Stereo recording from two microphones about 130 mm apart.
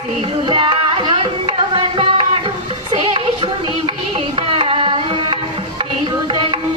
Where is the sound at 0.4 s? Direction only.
40° right (ahead or behind).